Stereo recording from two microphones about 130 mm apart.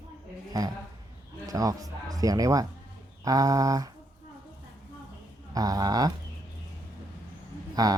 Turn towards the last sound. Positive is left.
turn(degrees=-30)  # may be behind; listen again after turning